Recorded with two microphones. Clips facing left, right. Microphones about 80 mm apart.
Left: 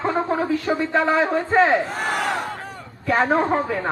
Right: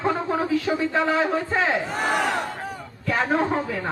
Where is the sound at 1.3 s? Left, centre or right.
Left.